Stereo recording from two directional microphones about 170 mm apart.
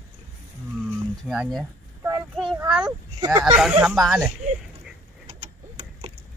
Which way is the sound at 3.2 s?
25° right (ahead or behind).